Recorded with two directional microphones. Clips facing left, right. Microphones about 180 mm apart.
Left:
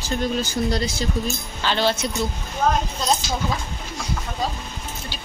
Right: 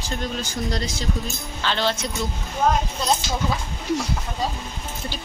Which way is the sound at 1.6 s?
5° left (ahead or behind).